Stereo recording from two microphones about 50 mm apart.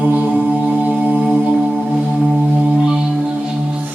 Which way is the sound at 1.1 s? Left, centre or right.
Right.